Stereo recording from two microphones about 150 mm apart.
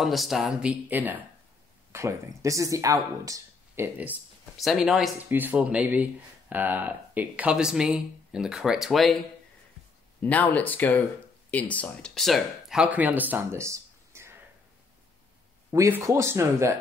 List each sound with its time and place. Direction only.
0.0 s speech: centre (ahead or behind)
4.6 s speech: centre (ahead or behind)
10.2 s speech: 10° left (ahead or behind); by 14.3 s 20° right (ahead or behind)
15.7 s speech: 20° right (ahead or behind)